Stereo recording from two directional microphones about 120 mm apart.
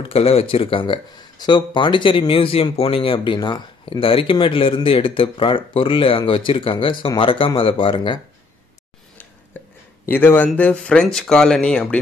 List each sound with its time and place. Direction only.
0.1 s speech: 55° left (ahead or behind)
9.5 s a sound: 15° left (ahead or behind)
10.0 s speech: 15° left (ahead or behind)